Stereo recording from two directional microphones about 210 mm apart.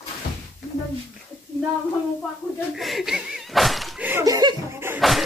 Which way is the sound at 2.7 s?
Centre (ahead or behind).